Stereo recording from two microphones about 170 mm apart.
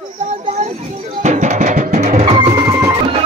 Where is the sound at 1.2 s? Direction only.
45° right (ahead or behind).